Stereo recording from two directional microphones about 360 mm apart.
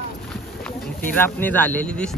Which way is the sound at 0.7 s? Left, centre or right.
Centre.